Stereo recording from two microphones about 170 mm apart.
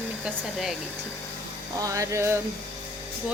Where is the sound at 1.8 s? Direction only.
20° right (ahead or behind).